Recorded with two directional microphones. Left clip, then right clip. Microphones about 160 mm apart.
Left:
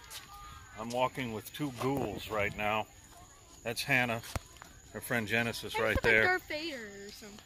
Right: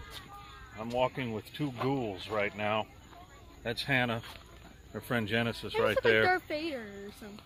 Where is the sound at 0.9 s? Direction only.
40° left (ahead or behind); by 2.9 s 60° left (ahead or behind).